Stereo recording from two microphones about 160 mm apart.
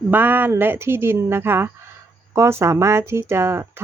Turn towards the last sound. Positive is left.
turn(degrees=-15)  # may be behind; listen again after turning